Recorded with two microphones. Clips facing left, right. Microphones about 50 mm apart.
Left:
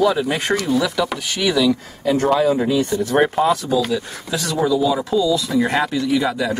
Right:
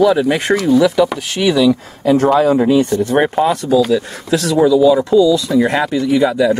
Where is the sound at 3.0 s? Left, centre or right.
Centre.